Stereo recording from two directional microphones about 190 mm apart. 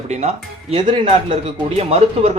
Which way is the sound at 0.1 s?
35° right (ahead or behind).